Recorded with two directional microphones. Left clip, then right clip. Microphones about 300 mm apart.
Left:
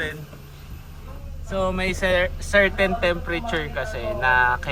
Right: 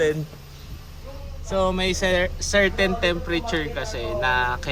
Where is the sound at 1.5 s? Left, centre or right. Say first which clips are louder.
Right 2 dB; centre.